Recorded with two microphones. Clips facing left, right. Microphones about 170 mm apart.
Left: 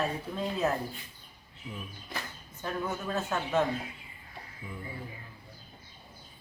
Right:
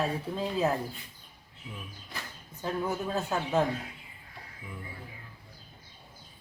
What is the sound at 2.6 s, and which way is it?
Speech, 15° right (ahead or behind).